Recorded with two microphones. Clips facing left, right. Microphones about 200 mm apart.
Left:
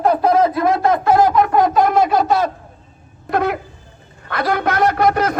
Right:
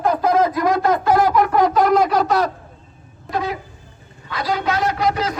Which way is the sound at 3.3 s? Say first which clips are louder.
Left 5 dB; 60° left (ahead or behind).